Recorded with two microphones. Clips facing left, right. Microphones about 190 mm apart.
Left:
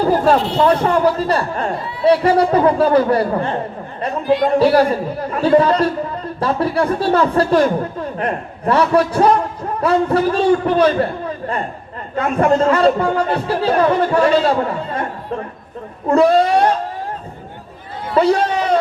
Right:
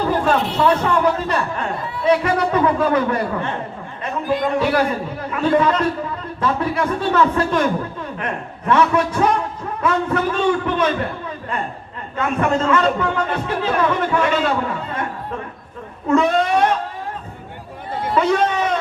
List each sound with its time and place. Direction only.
0.1 s speech: 35° left (ahead or behind)
12.1 s speech: 35° left (ahead or behind)
16.0 s speech: 35° left (ahead or behind)
18.1 s a sound: 35° left (ahead or behind)